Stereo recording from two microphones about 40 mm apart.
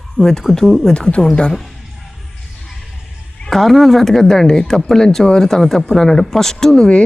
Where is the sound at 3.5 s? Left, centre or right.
Centre.